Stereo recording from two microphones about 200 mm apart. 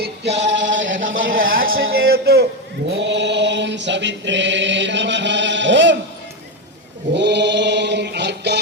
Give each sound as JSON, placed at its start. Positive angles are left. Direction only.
{"t": 0.0, "sound": "male singing", "side_deg": -60}
{"t": 1.3, "sound": "a sound", "side_deg": -45}
{"t": 1.6, "sound": "a sound", "side_deg": -85}
{"t": 2.0, "sound": "a man's voice", "side_deg": -50}
{"t": 2.9, "sound": "chant", "side_deg": -65}
{"t": 7.1, "sound": "chant", "side_deg": -60}